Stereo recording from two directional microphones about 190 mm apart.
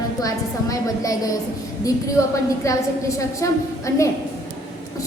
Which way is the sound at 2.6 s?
15° left (ahead or behind).